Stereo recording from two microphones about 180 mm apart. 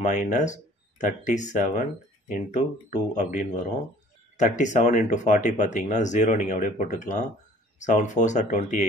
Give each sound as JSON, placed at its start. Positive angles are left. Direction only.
{"t": 0.1, "sound": "speech", "side_deg": 45}
{"t": 2.9, "sound": "speech", "side_deg": 45}